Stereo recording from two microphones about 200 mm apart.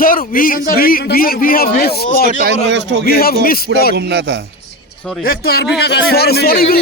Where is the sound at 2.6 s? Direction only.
65° right (ahead or behind).